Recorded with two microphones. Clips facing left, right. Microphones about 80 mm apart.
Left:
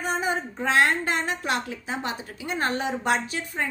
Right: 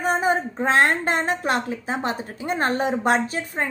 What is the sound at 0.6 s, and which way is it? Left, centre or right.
A woman's voice, right.